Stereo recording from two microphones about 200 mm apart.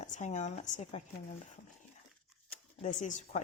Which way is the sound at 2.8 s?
35° left (ahead or behind).